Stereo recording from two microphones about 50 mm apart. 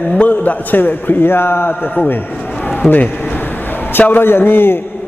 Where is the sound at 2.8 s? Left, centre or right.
Centre.